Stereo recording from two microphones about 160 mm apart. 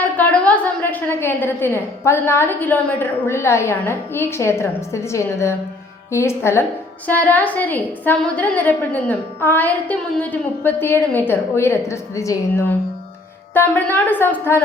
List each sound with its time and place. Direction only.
0.2 s a woman's voice: 10° left (ahead or behind)